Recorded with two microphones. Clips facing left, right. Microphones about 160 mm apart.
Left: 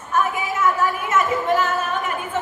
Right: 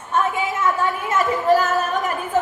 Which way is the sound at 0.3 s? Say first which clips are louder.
Even; 30° right (ahead or behind).